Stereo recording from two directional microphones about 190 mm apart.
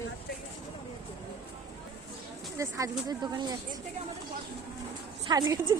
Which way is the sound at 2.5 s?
15° right (ahead or behind).